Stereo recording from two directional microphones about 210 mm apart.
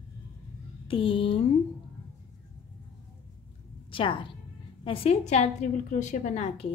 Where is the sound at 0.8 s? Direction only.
25° left (ahead or behind).